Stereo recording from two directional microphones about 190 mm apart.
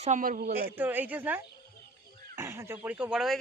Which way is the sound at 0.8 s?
10° right (ahead or behind).